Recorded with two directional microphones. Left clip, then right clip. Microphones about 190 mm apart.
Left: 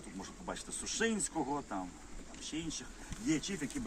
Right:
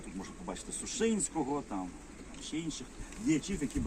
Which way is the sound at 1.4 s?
Centre (ahead or behind).